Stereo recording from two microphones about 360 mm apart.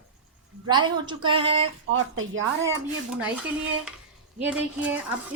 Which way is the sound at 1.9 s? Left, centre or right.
Right.